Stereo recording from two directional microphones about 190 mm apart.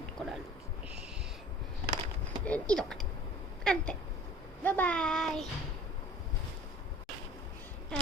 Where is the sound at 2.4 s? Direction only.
5° left (ahead or behind).